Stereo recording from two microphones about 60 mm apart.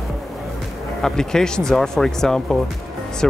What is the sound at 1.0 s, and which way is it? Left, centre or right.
Speech, centre.